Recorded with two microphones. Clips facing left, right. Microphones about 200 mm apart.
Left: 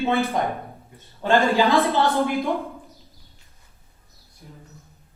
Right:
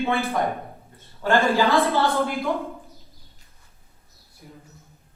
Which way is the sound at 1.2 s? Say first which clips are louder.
Left 1 dB; 15° left (ahead or behind).